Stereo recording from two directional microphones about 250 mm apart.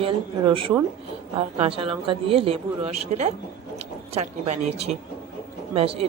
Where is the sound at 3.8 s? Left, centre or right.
Right.